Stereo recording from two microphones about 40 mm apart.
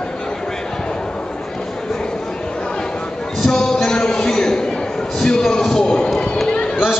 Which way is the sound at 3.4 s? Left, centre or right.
Centre.